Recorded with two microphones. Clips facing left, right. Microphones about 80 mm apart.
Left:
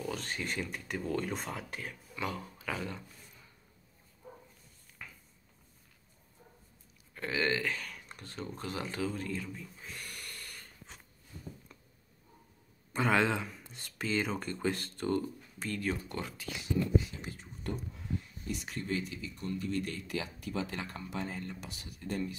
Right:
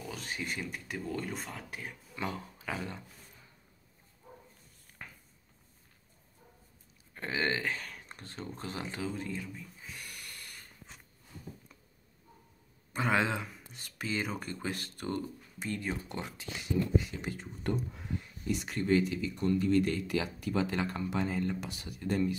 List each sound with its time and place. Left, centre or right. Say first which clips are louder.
0.0 s speech: left 2 dB; centre
1.7 s speech: left 1 dB; centre
2.1 s speech: even; right
5.0 s a sound: right 1 dB; right
7.2 s speech: left 1 dB; right
9.5 s a sound: left 1 dB; centre
12.9 s speech: left 1 dB; centre; by 16.5 s right
17.2 s speech: right 5 dB; right
18.5 s speech: right 7 dB; right